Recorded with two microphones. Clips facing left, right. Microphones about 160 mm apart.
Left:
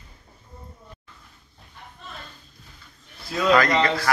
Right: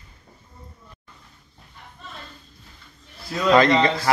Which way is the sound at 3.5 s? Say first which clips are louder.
Right 3 dB; 25° right (ahead or behind).